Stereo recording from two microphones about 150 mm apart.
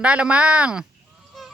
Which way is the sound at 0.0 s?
10° right (ahead or behind).